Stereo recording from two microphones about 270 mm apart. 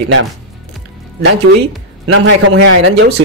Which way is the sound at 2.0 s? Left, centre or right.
Right.